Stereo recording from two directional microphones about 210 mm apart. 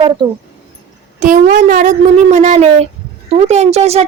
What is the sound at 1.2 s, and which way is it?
Speech, 35° right (ahead or behind).